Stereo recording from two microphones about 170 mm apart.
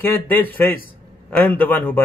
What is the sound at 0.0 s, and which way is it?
A man's voice, 10° left (ahead or behind).